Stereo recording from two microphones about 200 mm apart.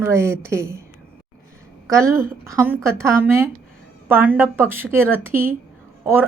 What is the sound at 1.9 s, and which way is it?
A woman's voice, 15° right (ahead or behind).